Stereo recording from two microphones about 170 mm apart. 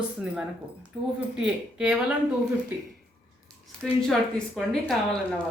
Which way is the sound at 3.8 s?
5° left (ahead or behind).